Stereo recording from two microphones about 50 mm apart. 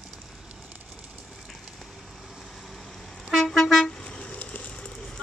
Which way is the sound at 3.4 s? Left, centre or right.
Centre.